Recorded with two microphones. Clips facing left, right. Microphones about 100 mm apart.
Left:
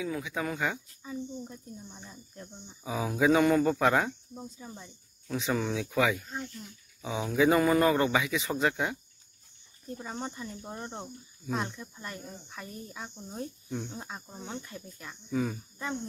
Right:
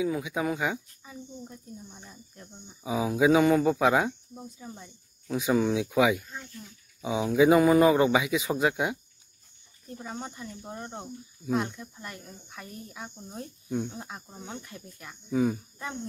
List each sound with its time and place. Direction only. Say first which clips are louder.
0.0 s speech: right 5 dB; 15° right (ahead or behind)
9.9 s speech: even; 5° right (ahead or behind)